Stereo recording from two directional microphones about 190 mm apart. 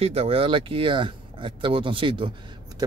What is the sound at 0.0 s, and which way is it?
Speech, 30° right (ahead or behind).